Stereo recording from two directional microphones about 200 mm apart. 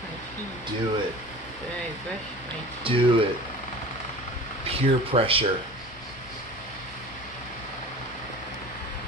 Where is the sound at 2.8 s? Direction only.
25° right (ahead or behind).